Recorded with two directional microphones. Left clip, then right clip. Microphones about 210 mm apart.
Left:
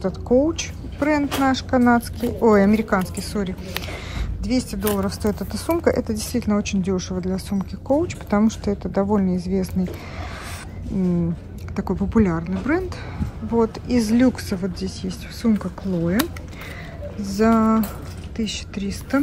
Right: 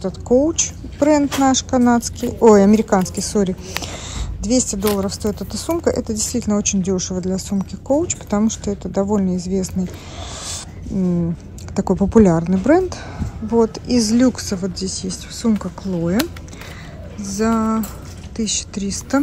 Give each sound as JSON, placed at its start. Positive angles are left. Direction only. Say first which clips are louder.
{"t": 0.0, "sound": "a woman's voice", "louder": "right 3 dB", "side_deg": -5}
{"t": 11.7, "sound": "a woman's voice", "louder": "right 7 dB", "side_deg": -15}